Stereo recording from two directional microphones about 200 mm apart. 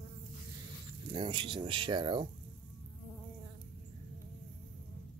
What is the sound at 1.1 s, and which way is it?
Speech, 25° right (ahead or behind).